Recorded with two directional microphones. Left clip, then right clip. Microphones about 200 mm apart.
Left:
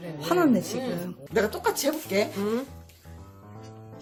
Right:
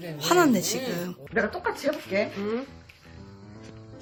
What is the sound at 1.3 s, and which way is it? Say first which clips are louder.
Speech: left 2 dB; 80° left.